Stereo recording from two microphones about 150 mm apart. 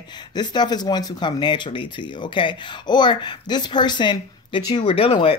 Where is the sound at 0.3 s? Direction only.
30° left (ahead or behind).